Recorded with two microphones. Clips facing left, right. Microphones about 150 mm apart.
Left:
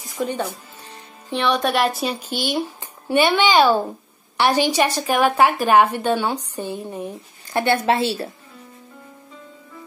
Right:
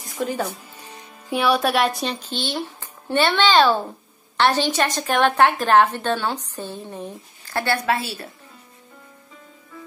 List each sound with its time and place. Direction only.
0.2 s a woman's voice: centre (ahead or behind); by 8.3 s 25° left (ahead or behind)